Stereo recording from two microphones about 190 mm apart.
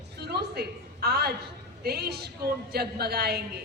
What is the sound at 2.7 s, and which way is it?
Speech, 55° right (ahead or behind).